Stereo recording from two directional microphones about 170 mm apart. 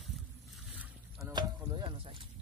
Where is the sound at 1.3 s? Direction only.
25° right (ahead or behind).